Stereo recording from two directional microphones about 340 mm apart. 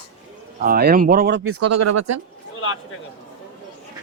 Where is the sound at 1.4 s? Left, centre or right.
Right.